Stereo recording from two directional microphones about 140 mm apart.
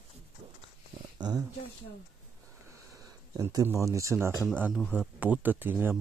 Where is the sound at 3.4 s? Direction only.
25° right (ahead or behind).